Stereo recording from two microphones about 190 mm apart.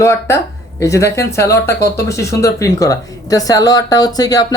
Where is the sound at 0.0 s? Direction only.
15° left (ahead or behind).